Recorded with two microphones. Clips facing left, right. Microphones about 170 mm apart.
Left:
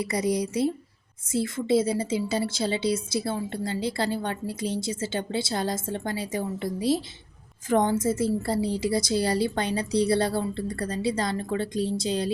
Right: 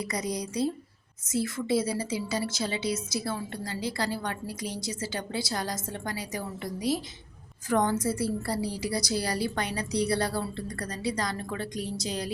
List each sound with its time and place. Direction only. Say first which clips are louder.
0.0 s a woman's voice: left 6 dB; 30° left (ahead or behind)